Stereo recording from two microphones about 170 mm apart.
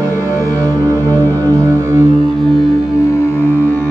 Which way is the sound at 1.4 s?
15° right (ahead or behind).